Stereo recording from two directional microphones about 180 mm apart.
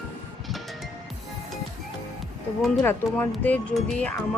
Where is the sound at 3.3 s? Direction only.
5° left (ahead or behind).